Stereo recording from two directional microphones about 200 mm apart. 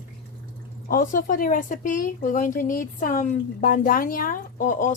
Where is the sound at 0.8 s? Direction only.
45° left (ahead or behind).